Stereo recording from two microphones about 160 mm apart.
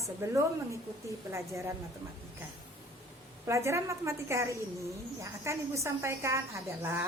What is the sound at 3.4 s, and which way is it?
A woman's voice, 15° right (ahead or behind).